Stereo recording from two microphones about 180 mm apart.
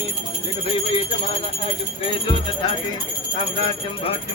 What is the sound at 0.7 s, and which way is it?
Music, 30° left (ahead or behind).